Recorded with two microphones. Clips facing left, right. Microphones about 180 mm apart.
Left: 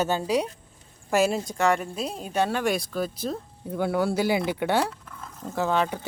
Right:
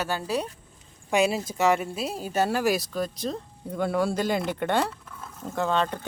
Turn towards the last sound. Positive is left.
turn(degrees=5)  # may be behind; listen again after turning